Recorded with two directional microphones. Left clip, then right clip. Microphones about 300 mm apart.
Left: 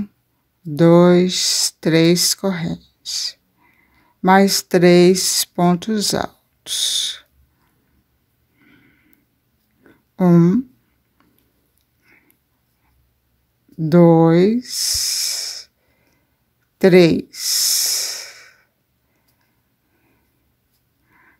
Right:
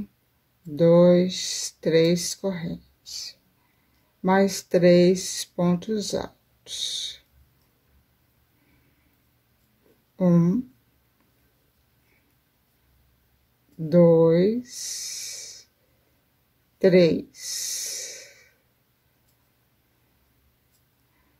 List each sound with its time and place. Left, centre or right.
0.7 s speech: left
10.1 s speech: left
13.8 s speech: left
16.7 s speech: left